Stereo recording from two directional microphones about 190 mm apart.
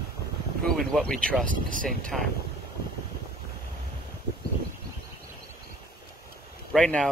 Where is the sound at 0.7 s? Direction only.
Centre (ahead or behind).